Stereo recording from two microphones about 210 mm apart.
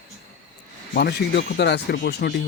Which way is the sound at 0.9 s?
50° left (ahead or behind).